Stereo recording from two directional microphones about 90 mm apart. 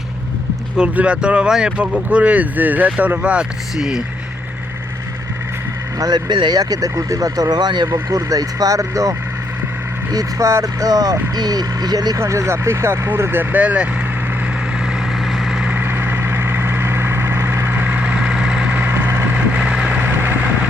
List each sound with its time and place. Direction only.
0.8 s speech: 15° right (ahead or behind)
6.0 s speech: 50° right (ahead or behind)
12.2 s speech: 30° right (ahead or behind); by 13.8 s 15° right (ahead or behind)
14.8 s vehicle: 5° right (ahead or behind)
15.7 s vehicle: 25° right (ahead or behind)
20.0 s vehicle: 20° right (ahead or behind)